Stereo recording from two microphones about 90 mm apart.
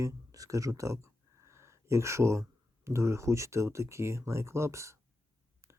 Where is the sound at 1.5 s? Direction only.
30° right (ahead or behind).